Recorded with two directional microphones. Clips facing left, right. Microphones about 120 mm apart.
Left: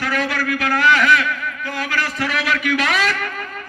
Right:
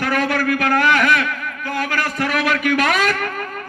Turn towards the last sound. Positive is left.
turn(degrees=-45)  # may be behind; listen again after turning